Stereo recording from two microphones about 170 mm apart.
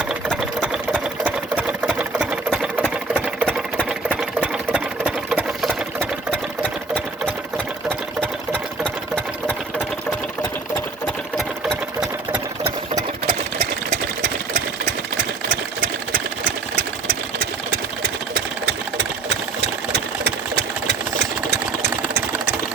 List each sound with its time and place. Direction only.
0.1 s sewing machine: 5° right (ahead or behind)
3.2 s sewing machine: 10° left (ahead or behind)
4.1 s sewing machine: 5° right (ahead or behind)
6.3 s sewing machine: 10° left (ahead or behind)
11.0 s sewing machine: 5° left (ahead or behind)
12.9 s sewing machine: 25° right (ahead or behind)
13.6 s sewing machine: 45° right (ahead or behind)
17.1 s sewing machine: 70° right (ahead or behind)